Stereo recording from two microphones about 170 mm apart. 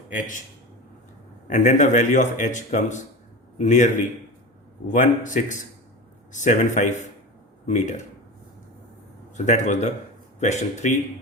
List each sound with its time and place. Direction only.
0.2 s a man's voice: 45° left (ahead or behind)
1.5 s a man's voice: 45° left (ahead or behind)
9.3 s a man's voice: 45° left (ahead or behind)